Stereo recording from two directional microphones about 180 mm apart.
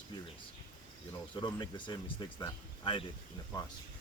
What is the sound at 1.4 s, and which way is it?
Speech, 25° left (ahead or behind).